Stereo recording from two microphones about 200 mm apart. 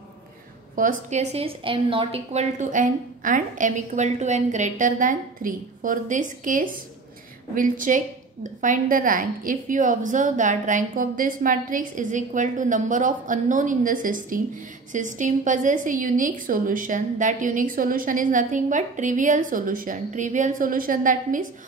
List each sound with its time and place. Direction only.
0.7 s a woman's voice: 40° right (ahead or behind)